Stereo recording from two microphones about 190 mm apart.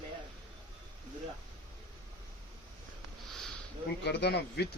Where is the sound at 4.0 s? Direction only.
65° left (ahead or behind).